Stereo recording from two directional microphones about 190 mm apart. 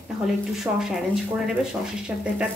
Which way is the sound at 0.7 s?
5° right (ahead or behind).